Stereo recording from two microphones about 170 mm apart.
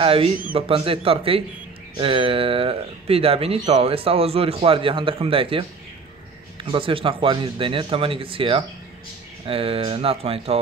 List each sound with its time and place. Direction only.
0.0 s speech: 35° right (ahead or behind)